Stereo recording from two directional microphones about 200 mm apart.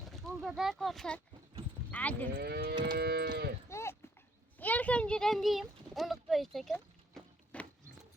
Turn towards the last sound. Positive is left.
turn(degrees=5)  # may be behind; listen again after turning